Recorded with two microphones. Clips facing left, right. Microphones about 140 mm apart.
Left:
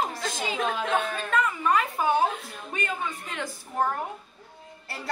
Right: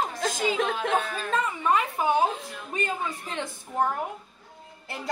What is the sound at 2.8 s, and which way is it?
Speech, 30° right (ahead or behind).